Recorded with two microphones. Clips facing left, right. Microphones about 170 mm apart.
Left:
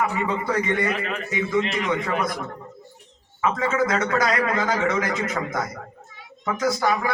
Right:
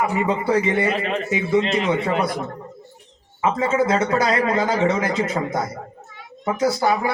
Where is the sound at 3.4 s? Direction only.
25° right (ahead or behind).